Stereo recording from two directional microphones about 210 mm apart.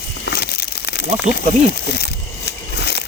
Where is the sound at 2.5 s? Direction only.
50° left (ahead or behind).